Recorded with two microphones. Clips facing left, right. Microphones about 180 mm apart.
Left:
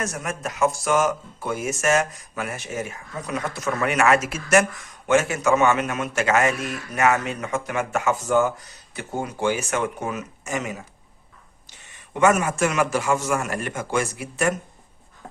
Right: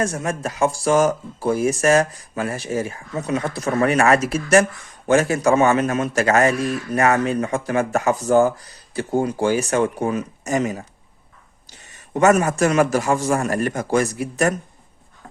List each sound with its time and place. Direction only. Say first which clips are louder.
0.0 s a man's voice: right 6 dB; 30° right (ahead or behind)